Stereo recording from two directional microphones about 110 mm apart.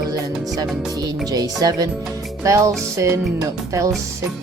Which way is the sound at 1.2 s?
35° right (ahead or behind).